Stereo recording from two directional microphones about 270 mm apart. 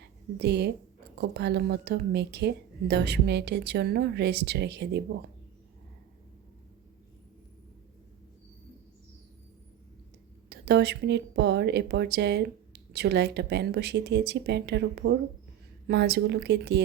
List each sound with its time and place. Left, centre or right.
0.3 s speech: right
10.5 s speech: right